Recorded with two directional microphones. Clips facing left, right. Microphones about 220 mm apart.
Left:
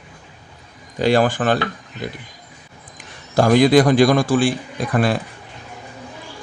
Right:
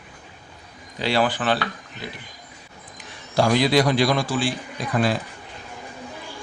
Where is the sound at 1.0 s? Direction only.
45° left (ahead or behind).